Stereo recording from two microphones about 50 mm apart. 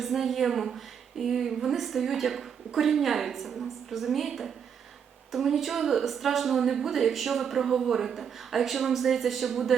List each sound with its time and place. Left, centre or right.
0.0 s a woman's voice: centre